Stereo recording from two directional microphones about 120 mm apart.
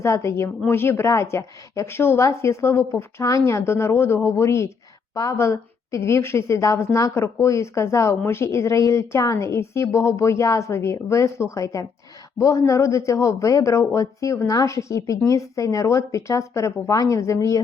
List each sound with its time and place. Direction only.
0.0 s a woman's voice: 25° left (ahead or behind)